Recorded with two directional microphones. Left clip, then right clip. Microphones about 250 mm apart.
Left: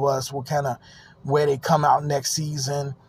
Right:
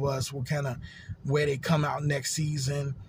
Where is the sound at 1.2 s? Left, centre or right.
Centre.